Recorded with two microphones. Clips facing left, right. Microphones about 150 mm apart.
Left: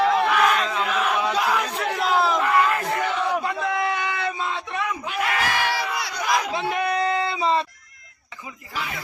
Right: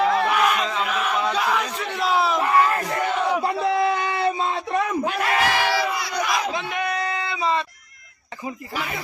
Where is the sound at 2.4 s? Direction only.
30° right (ahead or behind).